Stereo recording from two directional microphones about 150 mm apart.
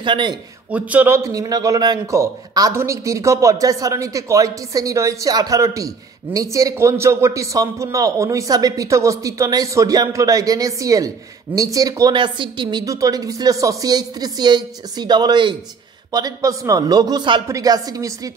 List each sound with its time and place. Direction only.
0.0 s speech: 35° right (ahead or behind)
0.7 s a man's voice: 10° right (ahead or behind); by 18.3 s 25° right (ahead or behind)